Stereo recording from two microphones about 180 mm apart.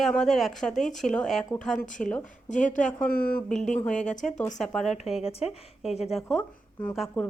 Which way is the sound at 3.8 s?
5° left (ahead or behind).